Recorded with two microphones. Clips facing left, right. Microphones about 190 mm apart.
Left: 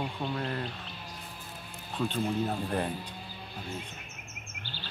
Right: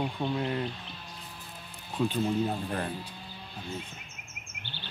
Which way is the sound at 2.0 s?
10° right (ahead or behind).